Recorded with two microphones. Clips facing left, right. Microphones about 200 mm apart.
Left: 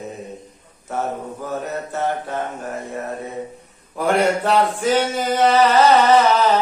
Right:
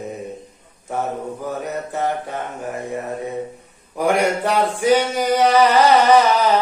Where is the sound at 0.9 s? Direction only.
15° right (ahead or behind).